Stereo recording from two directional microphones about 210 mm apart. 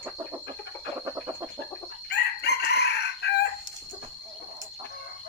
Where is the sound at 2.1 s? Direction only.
50° left (ahead or behind).